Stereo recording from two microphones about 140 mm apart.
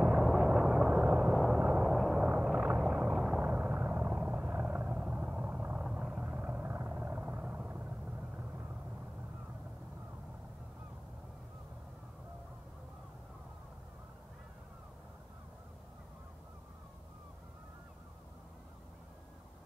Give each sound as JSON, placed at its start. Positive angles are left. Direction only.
{"t": 0.0, "sound": "vehicle", "side_deg": -5}